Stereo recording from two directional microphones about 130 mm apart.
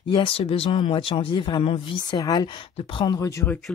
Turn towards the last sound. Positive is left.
turn(degrees=20)  # may be behind; listen again after turning